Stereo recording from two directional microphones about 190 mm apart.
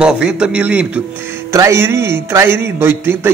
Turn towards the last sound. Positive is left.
turn(degrees=-10)  # may be behind; listen again after turning